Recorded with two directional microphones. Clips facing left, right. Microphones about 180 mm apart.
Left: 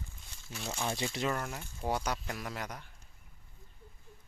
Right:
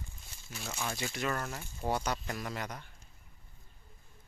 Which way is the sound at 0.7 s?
25° left (ahead or behind).